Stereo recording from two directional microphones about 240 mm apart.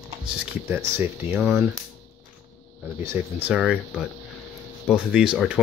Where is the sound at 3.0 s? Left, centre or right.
Centre.